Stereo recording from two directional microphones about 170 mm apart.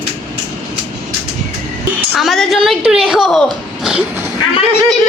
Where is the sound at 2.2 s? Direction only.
Centre (ahead or behind).